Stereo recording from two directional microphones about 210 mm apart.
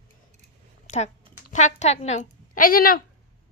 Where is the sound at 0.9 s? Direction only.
30° left (ahead or behind).